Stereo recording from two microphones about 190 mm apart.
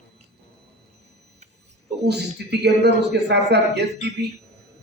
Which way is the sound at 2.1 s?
60° right (ahead or behind).